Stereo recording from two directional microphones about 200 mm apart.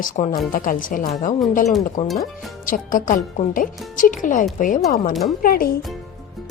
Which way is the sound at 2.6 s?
40° left (ahead or behind).